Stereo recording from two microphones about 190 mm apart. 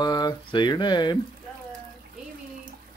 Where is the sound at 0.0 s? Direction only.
20° left (ahead or behind).